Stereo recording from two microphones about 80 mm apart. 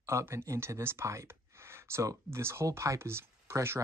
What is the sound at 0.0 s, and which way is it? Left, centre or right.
Speech, right.